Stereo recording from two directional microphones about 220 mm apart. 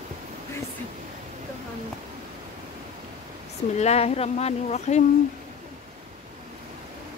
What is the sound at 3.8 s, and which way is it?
Speech, 30° left (ahead or behind).